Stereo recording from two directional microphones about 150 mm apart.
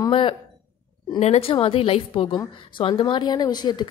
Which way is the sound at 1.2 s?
45° left (ahead or behind).